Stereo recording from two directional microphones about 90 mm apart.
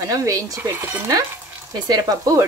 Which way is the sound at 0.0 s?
40° right (ahead or behind).